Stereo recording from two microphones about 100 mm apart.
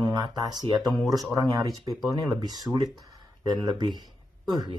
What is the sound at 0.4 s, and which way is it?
Speech, 45° right (ahead or behind).